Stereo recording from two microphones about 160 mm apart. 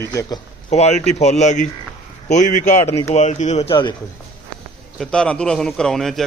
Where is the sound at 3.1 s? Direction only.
45° left (ahead or behind).